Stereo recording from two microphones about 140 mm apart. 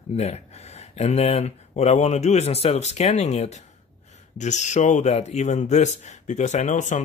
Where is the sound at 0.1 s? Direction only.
50° left (ahead or behind).